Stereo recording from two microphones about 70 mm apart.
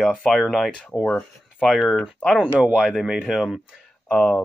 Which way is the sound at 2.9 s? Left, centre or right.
Centre.